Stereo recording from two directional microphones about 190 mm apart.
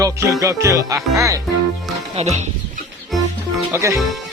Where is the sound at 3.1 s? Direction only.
Centre (ahead or behind).